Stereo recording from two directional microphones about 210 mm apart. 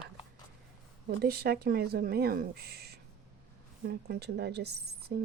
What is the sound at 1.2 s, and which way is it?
Speech, 50° right (ahead or behind).